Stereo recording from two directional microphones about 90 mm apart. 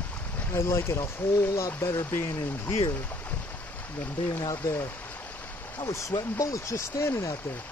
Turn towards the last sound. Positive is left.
turn(degrees=20)  # may be behind; listen again after turning